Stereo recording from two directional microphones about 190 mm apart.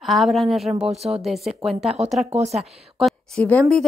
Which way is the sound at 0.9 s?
35° right (ahead or behind).